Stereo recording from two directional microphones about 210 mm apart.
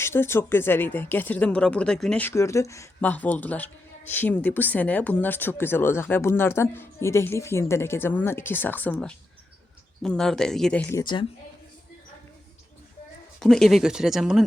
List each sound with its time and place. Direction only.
0.0 s speech: 10° left (ahead or behind)
11.0 s speech: 20° left (ahead or behind)
13.4 s speech: centre (ahead or behind)